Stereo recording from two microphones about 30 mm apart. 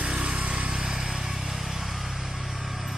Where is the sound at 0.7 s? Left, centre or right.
Right.